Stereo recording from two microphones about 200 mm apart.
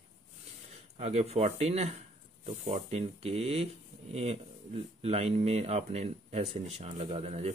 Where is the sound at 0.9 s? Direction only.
30° right (ahead or behind).